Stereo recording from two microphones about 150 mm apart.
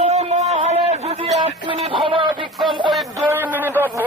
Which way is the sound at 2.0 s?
35° right (ahead or behind).